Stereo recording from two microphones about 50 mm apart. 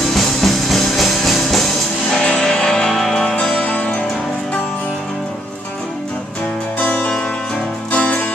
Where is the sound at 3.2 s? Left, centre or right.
Centre.